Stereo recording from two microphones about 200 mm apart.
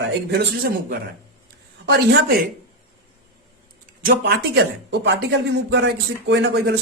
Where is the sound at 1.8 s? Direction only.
55° right (ahead or behind).